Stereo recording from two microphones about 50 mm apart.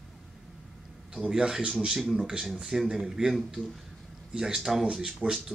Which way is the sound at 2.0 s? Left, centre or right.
Centre.